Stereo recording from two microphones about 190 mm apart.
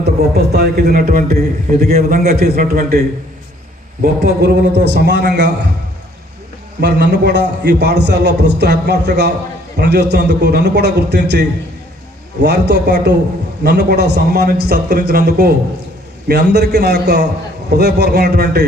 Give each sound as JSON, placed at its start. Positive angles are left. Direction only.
{"t": 0.0, "sound": "a man's voice", "side_deg": -55}
{"t": 4.0, "sound": "a man's voice", "side_deg": -60}
{"t": 6.7, "sound": "a man's voice", "side_deg": -65}